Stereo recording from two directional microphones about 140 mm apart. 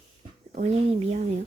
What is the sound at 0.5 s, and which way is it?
Speech, 45° right (ahead or behind).